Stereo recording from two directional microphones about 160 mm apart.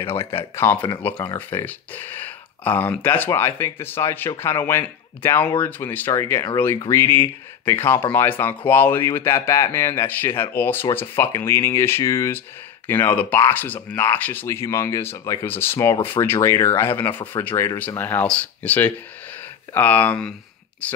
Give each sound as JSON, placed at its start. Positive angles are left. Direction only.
{"t": 0.2, "sound": "speech", "side_deg": 15}